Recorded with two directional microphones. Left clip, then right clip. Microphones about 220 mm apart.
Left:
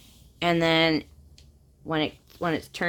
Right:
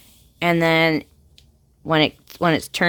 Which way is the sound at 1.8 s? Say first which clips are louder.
Right 9 dB; 45° right (ahead or behind).